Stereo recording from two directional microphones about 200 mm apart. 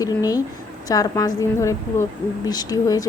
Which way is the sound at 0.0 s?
15° left (ahead or behind).